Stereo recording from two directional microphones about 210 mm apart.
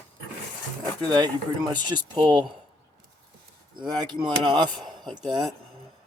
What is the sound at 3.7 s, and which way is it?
Speech, 20° right (ahead or behind).